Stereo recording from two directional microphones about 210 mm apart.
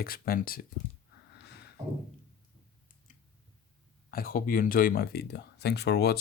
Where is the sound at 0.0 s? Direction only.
45° left (ahead or behind).